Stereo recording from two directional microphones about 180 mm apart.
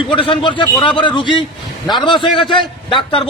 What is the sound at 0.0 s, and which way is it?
A man's voice, 30° left (ahead or behind).